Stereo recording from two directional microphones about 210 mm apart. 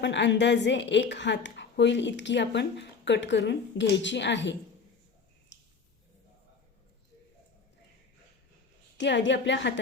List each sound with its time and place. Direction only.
0.0 s a woman's voice: 55° left (ahead or behind)
9.0 s a woman's voice: 55° left (ahead or behind)